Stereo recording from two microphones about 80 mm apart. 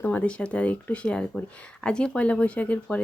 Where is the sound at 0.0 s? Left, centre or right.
Centre.